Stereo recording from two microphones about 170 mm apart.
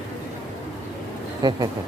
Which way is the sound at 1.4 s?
25° right (ahead or behind).